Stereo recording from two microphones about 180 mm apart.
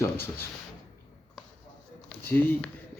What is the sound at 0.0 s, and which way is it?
Speech, 15° left (ahead or behind).